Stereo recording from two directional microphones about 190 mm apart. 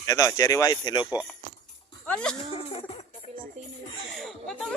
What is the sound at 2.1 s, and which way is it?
Speech, 5° left (ahead or behind).